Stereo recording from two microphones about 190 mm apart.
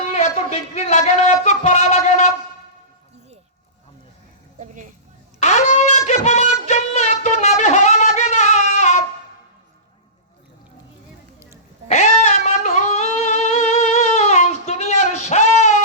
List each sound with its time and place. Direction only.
0.2 s music: 35° left (ahead or behind)
4.6 s a woman's voice: 40° right (ahead or behind)
5.4 s a sound: 35° left (ahead or behind)
11.9 s music: 40° left (ahead or behind)